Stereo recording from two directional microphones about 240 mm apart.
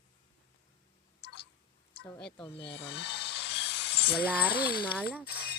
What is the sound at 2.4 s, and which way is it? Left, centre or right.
Speech, left.